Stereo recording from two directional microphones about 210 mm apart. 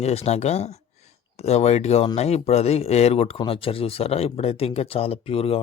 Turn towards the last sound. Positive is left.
turn(degrees=25)  # may be behind; listen again after turning